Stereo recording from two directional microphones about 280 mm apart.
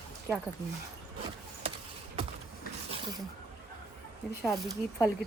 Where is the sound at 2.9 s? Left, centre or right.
Centre.